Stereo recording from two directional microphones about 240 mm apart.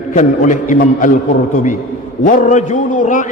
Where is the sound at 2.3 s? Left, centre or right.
Left.